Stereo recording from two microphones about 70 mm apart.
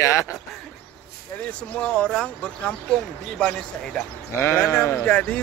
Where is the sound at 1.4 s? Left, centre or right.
Centre.